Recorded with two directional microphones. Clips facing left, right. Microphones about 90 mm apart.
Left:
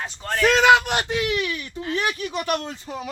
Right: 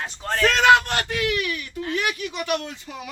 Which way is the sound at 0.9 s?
20° left (ahead or behind).